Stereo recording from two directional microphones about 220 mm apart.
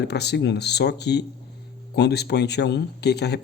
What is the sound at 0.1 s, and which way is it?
Speech, 50° left (ahead or behind).